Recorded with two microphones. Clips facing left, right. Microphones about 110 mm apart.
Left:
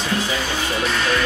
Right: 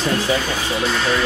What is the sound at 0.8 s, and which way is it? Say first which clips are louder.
Music: right 2 dB; 35° right (ahead or behind).